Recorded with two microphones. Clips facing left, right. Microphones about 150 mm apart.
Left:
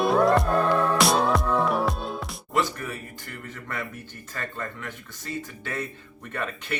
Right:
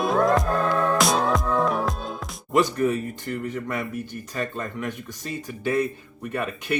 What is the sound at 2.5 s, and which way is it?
Speech, 20° right (ahead or behind).